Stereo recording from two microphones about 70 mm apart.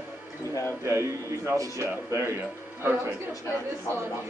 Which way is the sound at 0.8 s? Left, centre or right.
Right.